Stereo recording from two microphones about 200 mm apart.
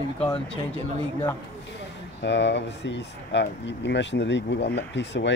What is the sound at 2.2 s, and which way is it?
Speech, 60° left (ahead or behind).